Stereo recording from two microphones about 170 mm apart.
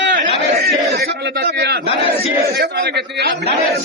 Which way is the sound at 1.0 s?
70° right (ahead or behind).